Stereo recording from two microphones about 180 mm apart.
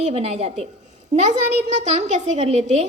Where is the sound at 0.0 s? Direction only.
35° right (ahead or behind).